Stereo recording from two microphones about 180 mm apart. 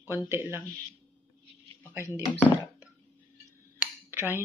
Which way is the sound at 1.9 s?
15° right (ahead or behind).